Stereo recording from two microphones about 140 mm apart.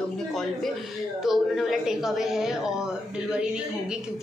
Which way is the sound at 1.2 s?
Centre (ahead or behind).